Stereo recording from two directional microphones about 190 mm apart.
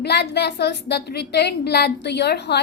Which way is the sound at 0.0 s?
60° left (ahead or behind).